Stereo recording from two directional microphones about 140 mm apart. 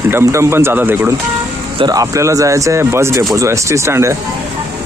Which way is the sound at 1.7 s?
30° right (ahead or behind).